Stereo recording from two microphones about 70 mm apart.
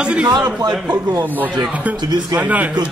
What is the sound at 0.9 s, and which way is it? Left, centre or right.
Speech, right.